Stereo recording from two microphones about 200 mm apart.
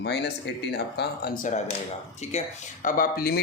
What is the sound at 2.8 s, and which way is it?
Speech, 45° left (ahead or behind).